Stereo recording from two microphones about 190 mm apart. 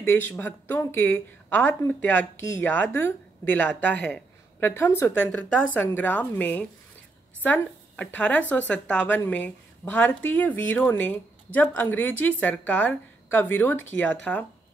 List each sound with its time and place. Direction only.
0.0 s a woman's voice: 10° left (ahead or behind)